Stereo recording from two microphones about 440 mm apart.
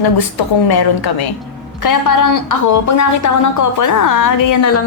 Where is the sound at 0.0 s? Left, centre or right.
Left.